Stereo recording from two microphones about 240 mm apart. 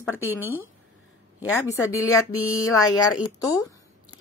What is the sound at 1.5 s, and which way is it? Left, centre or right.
Speech, centre.